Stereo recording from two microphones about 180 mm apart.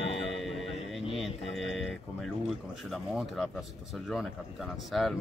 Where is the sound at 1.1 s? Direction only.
Centre (ahead or behind).